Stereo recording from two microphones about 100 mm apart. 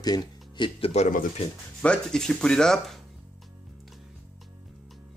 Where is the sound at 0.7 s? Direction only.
70° left (ahead or behind).